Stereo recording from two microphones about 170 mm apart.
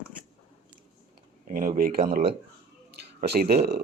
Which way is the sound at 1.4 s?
50° right (ahead or behind).